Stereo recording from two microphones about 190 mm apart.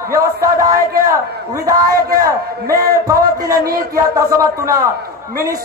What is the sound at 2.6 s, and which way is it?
Speech, 50° right (ahead or behind).